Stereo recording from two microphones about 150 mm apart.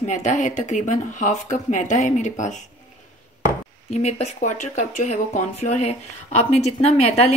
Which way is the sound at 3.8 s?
50° left (ahead or behind).